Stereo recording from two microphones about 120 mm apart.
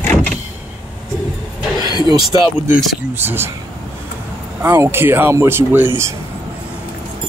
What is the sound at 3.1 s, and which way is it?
Speech, 20° right (ahead or behind).